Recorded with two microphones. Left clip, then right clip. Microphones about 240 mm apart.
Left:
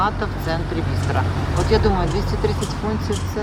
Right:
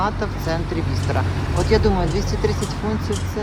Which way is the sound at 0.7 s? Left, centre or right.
Centre.